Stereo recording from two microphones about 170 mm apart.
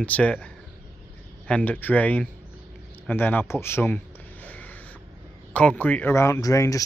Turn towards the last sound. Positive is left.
turn(degrees=20)  # may be behind; listen again after turning